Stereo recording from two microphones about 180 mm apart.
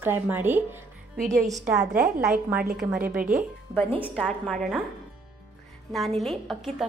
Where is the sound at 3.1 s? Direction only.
50° right (ahead or behind).